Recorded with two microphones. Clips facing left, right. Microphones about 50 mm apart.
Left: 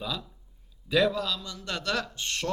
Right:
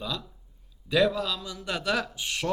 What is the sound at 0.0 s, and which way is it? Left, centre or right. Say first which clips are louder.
A man's voice: even; centre.